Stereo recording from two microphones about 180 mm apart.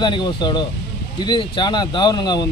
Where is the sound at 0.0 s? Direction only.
25° left (ahead or behind).